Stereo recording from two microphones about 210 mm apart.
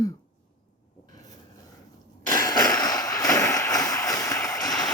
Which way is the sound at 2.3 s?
20° left (ahead or behind).